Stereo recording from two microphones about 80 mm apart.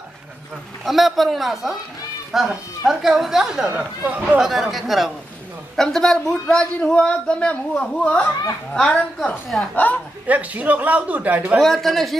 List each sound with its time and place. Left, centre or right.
0.8 s a man's voice: centre
3.6 s speech: centre
4.4 s a man's voice: centre; by 10.0 s left
10.2 s speech: centre
11.5 s a man's voice: centre